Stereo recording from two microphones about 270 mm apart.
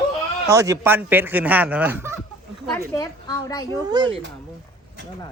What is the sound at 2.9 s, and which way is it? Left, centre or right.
Speech, centre.